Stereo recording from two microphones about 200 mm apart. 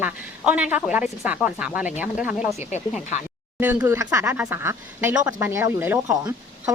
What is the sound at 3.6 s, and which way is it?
Speech, 10° right (ahead or behind).